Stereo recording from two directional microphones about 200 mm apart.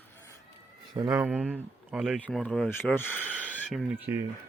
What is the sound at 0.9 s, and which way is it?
Speech, 20° right (ahead or behind).